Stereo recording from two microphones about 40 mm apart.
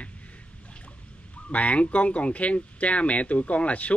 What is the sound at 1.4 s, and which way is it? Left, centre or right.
Speech, left.